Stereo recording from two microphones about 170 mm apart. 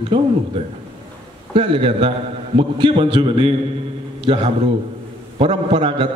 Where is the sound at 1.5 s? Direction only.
35° right (ahead or behind).